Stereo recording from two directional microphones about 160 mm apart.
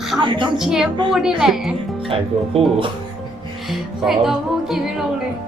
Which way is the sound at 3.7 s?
Centre (ahead or behind).